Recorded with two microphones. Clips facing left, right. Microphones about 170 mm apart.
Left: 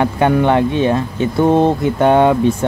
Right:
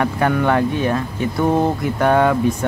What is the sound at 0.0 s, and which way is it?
Speech, 25° left (ahead or behind).